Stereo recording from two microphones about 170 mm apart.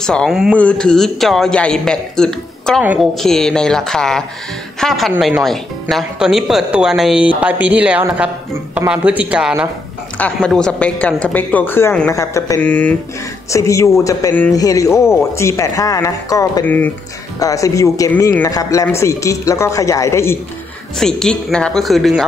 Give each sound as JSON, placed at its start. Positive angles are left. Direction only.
{"t": 0.0, "sound": "a man's voice", "side_deg": 5}
{"t": 2.8, "sound": "speech", "side_deg": -10}
{"t": 3.2, "sound": "a man's voice", "side_deg": 5}
{"t": 10.1, "sound": "speech", "side_deg": 5}
{"t": 21.0, "sound": "a man's voice", "side_deg": 0}